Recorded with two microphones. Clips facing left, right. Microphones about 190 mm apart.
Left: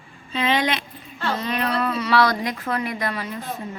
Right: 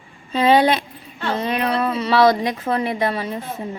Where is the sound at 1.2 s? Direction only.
20° right (ahead or behind).